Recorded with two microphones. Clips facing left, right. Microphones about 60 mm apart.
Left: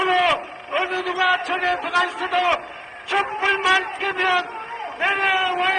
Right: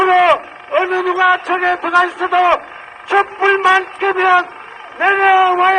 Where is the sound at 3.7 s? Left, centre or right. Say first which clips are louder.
Right 7 dB; centre.